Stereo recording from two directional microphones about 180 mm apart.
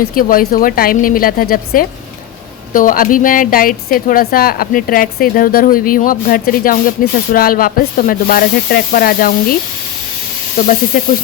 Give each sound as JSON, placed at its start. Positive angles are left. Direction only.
{"t": 0.0, "sound": "a woman's voice", "side_deg": 50}